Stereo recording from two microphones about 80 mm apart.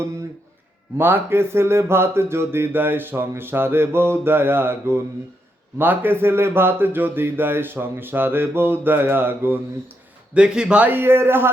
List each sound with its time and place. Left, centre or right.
0.9 s speech: right
10.3 s speech: centre; by 11.5 s right